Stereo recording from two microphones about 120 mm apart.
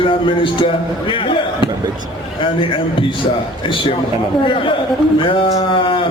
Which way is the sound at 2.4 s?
45° left (ahead or behind).